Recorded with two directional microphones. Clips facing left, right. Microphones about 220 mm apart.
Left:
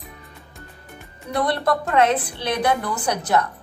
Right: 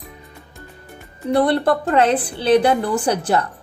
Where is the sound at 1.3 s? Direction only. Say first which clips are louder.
Right 5 dB; 30° right (ahead or behind).